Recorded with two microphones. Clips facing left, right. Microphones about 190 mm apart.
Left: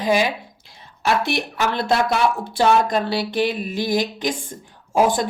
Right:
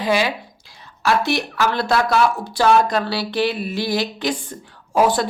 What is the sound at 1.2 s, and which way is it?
Speech, 55° left (ahead or behind).